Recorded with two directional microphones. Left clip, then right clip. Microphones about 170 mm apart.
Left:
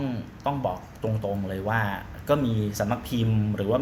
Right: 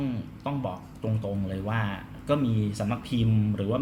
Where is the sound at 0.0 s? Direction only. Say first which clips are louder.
Left 4 dB; 5° right (ahead or behind).